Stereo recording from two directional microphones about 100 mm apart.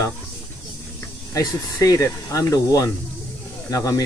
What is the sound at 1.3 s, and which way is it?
Speech, 35° left (ahead or behind).